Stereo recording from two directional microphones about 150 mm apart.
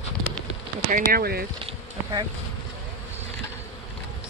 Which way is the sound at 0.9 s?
85° right.